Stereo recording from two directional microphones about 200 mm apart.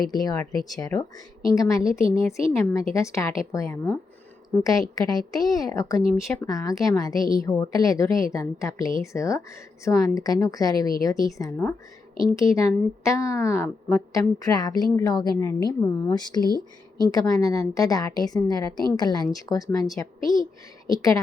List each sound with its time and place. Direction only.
0.1 s a woman's voice: 20° left (ahead or behind)
16.4 s speech: 20° right (ahead or behind)
17.0 s a woman's voice: 20° left (ahead or behind)
20.8 s a woman's voice: 15° left (ahead or behind)